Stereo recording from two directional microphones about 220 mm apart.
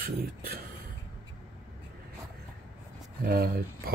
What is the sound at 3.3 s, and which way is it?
Speech, 45° right (ahead or behind).